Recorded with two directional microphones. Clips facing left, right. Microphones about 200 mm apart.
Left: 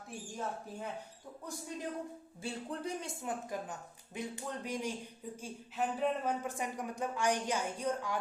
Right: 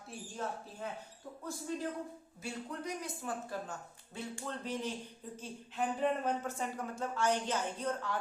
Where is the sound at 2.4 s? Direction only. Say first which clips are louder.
Left 1 dB; 30° left (ahead or behind).